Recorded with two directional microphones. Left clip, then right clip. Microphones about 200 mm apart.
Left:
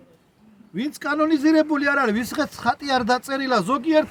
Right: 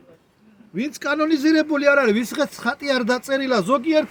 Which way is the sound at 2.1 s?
15° left (ahead or behind).